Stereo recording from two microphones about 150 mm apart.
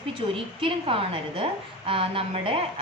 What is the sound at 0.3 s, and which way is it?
Speech, 35° right (ahead or behind).